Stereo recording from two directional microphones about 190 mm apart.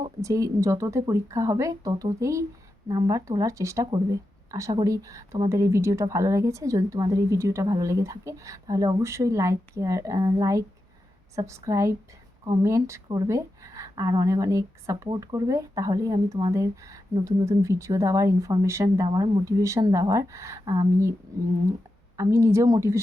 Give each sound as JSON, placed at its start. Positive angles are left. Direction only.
{"t": 0.2, "sound": "speech", "side_deg": -15}